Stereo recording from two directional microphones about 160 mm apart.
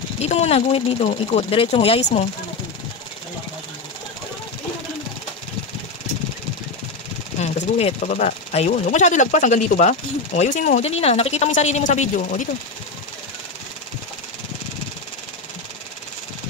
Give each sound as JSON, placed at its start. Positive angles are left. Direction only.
{"t": 0.2, "sound": "speech", "side_deg": 40}
{"t": 7.3, "sound": "speech", "side_deg": 45}